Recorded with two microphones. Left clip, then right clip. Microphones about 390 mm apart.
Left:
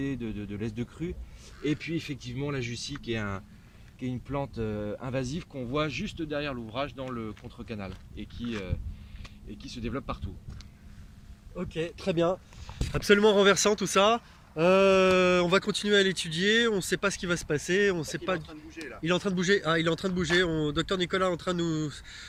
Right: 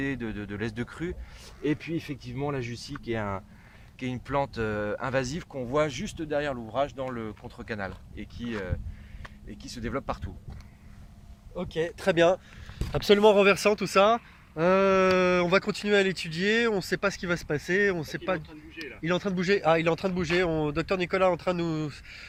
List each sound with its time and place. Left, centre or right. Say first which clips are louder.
0.0 s speech: right 2 dB; right
11.5 s speech: right 4 dB; centre
12.9 s speech: right 2 dB; centre